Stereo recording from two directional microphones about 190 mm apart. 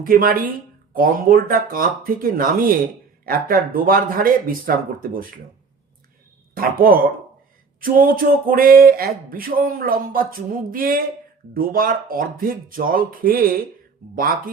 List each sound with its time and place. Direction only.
0.0 s speech: 50° right (ahead or behind)
6.5 s speech: 50° right (ahead or behind)